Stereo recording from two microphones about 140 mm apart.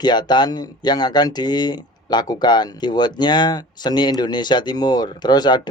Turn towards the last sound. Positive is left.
turn(degrees=30)  # may be behind; listen again after turning